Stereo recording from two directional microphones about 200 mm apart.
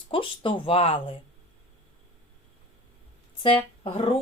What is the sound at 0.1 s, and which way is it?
Speech, 25° left (ahead or behind).